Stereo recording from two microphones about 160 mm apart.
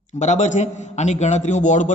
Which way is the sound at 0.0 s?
45° left (ahead or behind).